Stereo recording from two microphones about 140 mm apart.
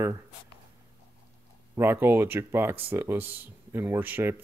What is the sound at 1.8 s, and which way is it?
Speech, 15° right (ahead or behind).